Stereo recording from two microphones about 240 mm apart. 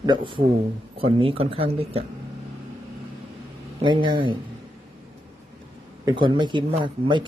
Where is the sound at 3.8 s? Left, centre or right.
Centre.